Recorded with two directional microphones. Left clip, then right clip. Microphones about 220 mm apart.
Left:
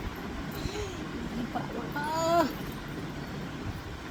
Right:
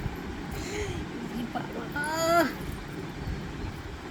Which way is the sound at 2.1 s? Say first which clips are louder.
Right 2 dB; 20° right (ahead or behind).